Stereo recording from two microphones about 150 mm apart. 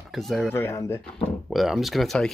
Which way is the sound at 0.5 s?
15° left (ahead or behind).